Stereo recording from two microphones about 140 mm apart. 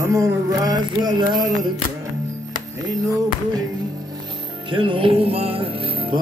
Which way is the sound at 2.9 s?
25° right (ahead or behind).